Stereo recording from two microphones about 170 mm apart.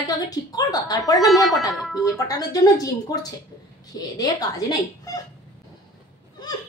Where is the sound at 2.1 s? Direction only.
20° left (ahead or behind).